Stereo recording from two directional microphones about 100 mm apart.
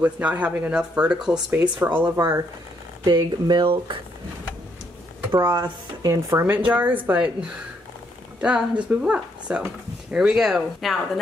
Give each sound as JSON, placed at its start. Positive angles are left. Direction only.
{"t": 0.0, "sound": "speech", "side_deg": -15}
{"t": 2.1, "sound": "speech", "side_deg": -30}
{"t": 3.1, "sound": "speech", "side_deg": -45}
{"t": 3.6, "sound": "speech", "side_deg": -55}
{"t": 5.3, "sound": "speech", "side_deg": -45}
{"t": 6.3, "sound": "speech", "side_deg": -20}
{"t": 8.4, "sound": "speech", "side_deg": -10}